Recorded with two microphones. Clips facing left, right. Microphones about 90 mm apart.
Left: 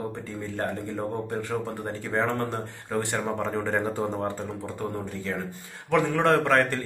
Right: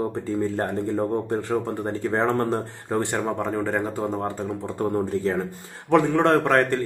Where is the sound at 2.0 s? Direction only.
35° right (ahead or behind).